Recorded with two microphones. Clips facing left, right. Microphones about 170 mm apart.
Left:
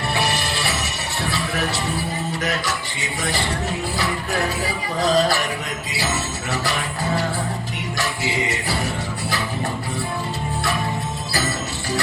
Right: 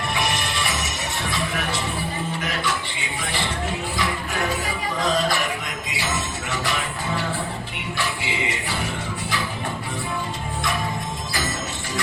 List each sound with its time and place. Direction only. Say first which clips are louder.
0.1 s music: left 3 dB; 35° left (ahead or behind)
3.9 s music: left 2 dB; 35° left (ahead or behind)
7.9 s music: left 3 dB; 40° left (ahead or behind)